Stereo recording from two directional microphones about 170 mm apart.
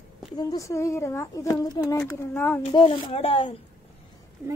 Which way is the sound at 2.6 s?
35° left (ahead or behind).